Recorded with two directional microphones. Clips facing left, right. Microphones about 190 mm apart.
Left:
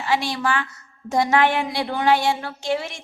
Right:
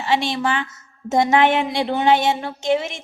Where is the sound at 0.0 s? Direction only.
25° right (ahead or behind).